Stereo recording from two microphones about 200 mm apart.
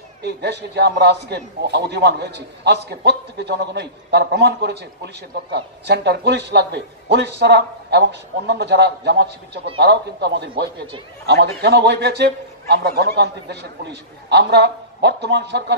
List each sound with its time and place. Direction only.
0.2 s a man's voice: 55° right (ahead or behind)